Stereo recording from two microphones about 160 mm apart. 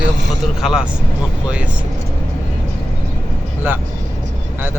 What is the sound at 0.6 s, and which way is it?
Speech, 5° right (ahead or behind).